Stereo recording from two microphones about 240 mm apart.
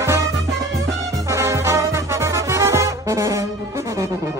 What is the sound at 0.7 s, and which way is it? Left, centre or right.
Music, centre.